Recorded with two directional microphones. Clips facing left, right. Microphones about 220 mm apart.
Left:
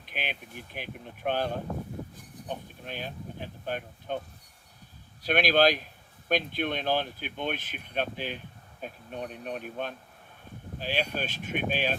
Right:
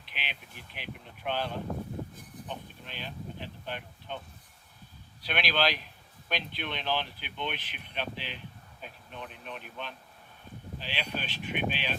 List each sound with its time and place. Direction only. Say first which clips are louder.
0.0 s speech: left 7 dB; 45° left (ahead or behind)
5.2 s speech: left 7 dB; 45° left (ahead or behind)